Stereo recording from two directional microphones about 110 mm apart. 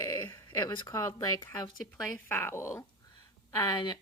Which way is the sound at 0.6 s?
40° left (ahead or behind).